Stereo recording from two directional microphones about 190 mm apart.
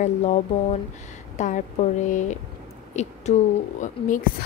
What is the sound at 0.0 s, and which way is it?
A woman's voice, 35° left (ahead or behind).